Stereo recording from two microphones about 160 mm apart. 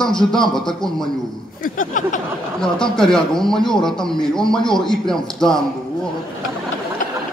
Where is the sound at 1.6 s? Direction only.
55° left (ahead or behind).